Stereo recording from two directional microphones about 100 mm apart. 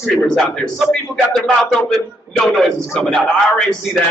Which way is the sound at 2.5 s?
Centre (ahead or behind).